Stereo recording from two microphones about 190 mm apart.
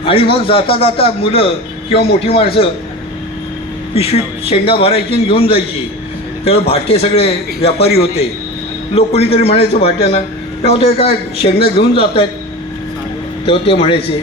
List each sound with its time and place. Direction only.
0.0 s a man's voice: 30° left (ahead or behind)
3.9 s a man's voice: 30° left (ahead or behind)
13.4 s a man's voice: 30° left (ahead or behind)